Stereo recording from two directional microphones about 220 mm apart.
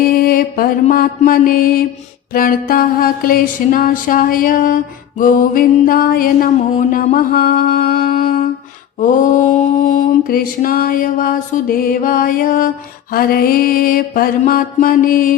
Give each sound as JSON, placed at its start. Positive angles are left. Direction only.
{"t": 0.0, "sound": "mantra", "side_deg": 40}